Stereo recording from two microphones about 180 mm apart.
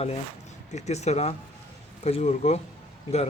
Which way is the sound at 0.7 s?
40° left (ahead or behind).